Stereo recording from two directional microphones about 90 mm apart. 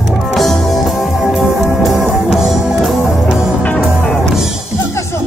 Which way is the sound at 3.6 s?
10° left (ahead or behind).